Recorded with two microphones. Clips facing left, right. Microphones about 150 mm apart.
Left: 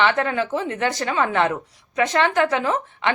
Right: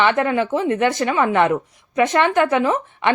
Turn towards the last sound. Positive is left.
turn(degrees=-20)  # may be behind; listen again after turning